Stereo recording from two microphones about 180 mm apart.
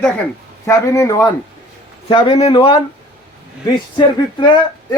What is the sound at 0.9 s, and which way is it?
Speech, 15° left (ahead or behind).